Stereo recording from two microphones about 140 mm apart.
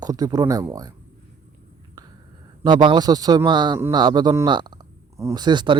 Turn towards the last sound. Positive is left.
turn(degrees=-35)  # may be behind; listen again after turning